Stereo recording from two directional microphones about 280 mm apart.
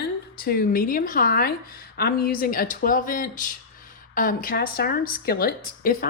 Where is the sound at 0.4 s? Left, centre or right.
Left.